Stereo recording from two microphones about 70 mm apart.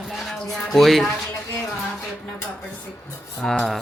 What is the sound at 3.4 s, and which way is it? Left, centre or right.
Speech, centre.